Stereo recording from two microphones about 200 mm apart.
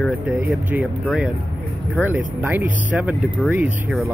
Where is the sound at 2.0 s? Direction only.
10° right (ahead or behind).